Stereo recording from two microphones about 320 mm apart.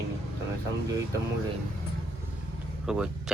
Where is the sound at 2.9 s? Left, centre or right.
Centre.